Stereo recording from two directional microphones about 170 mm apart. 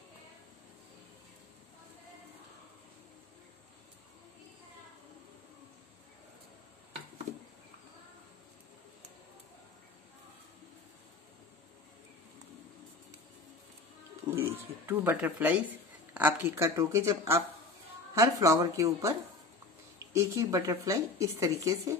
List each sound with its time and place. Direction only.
14.3 s speech: 15° right (ahead or behind)